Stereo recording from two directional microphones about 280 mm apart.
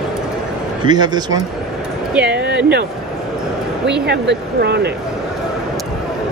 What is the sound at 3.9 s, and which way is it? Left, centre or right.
Speech, right.